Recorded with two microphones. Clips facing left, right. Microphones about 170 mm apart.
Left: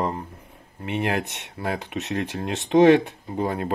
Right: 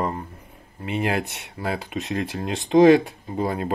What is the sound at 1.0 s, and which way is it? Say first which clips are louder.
Speech: right 1 dB; 5° right (ahead or behind).